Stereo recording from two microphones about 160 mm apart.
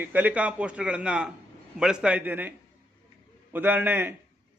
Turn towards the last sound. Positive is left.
turn(degrees=-10)  # may be behind; listen again after turning